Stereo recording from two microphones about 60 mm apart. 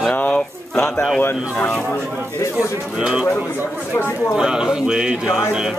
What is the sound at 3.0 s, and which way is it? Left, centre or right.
Speech, centre.